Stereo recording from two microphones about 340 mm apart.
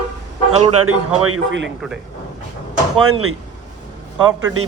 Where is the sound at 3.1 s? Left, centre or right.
Right.